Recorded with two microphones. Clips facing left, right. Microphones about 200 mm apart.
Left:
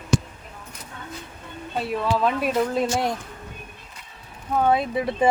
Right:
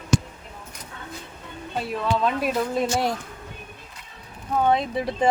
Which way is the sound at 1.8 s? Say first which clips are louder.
Left 1 dB; centre (ahead or behind).